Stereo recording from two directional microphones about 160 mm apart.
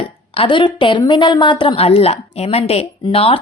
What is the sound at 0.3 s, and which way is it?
A woman's voice, 30° left (ahead or behind).